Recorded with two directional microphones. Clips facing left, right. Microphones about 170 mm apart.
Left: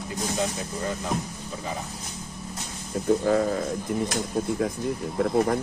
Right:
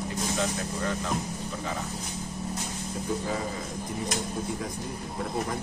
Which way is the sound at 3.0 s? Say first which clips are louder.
Left 10 dB; 60° left (ahead or behind).